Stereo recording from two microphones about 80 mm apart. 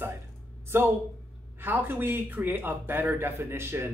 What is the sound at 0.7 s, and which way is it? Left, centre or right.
A man's voice, right.